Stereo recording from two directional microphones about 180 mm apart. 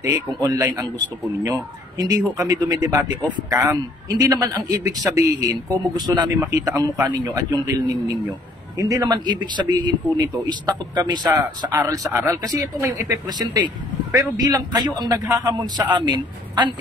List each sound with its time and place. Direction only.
0.4 s a man's voice: 20° right (ahead or behind)